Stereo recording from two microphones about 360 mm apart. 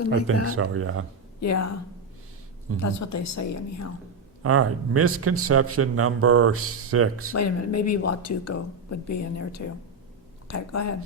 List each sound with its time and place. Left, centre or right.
0.5 s a man's voice: right
1.4 s speech: left
2.8 s speech: left
4.4 s a man's voice: right
7.3 s speech: left